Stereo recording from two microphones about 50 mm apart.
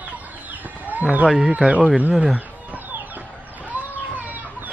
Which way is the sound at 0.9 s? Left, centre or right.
Right.